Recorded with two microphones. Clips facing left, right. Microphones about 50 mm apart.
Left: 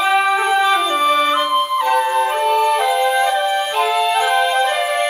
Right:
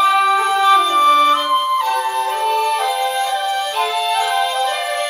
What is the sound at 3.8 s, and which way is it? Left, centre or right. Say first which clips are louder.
Music: left 3 dB; centre.